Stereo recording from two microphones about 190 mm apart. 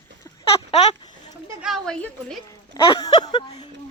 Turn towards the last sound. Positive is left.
turn(degrees=25)  # may be behind; listen again after turning